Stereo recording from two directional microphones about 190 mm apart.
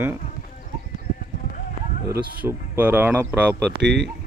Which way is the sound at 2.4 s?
10° right (ahead or behind).